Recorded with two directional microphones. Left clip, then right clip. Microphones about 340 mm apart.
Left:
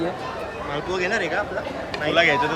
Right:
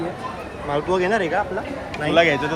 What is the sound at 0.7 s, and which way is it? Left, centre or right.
Speech, centre.